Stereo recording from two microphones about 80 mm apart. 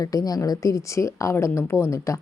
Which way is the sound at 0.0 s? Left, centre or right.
Left.